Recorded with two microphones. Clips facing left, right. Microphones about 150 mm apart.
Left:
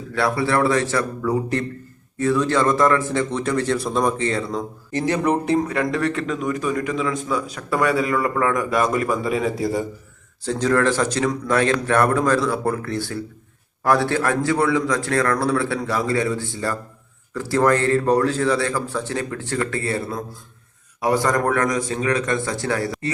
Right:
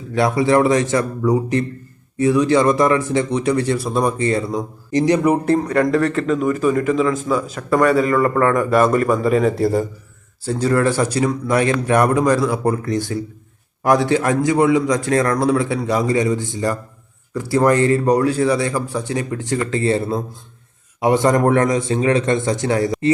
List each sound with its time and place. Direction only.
0.1 s a man's voice: 20° right (ahead or behind)